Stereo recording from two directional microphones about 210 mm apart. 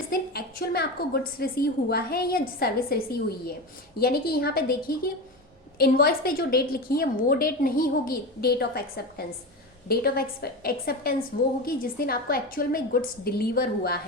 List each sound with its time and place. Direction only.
0.1 s a woman's voice: 50° left (ahead or behind)